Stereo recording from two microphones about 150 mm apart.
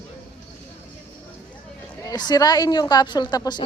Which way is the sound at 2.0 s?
25° left (ahead or behind).